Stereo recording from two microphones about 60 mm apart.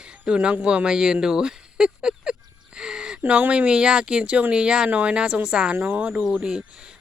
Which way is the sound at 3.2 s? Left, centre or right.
Right.